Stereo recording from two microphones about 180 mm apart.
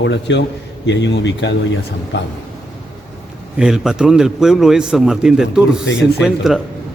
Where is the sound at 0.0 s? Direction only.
80° left.